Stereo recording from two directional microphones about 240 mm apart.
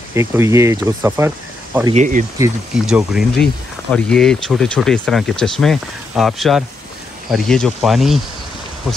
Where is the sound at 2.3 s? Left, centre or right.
Centre.